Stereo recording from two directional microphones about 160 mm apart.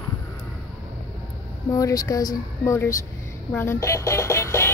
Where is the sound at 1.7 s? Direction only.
20° left (ahead or behind).